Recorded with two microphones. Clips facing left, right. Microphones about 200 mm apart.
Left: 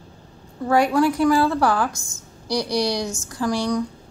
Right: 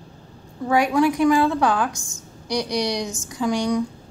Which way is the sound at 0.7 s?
15° right (ahead or behind).